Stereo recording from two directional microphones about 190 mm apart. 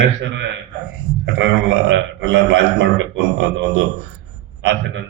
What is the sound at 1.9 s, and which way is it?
Speech, 85° right.